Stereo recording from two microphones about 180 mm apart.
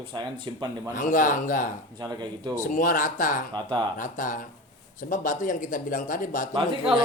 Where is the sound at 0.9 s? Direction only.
45° left (ahead or behind).